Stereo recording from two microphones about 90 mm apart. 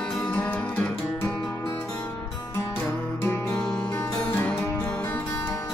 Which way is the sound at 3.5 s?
10° left (ahead or behind).